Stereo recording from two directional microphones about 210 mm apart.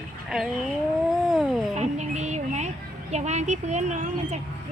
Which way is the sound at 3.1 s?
35° right (ahead or behind).